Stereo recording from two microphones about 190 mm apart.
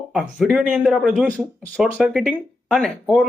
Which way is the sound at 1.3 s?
5° left (ahead or behind).